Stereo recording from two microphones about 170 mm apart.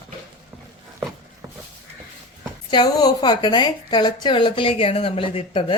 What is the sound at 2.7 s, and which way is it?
A woman's voice, 25° left (ahead or behind).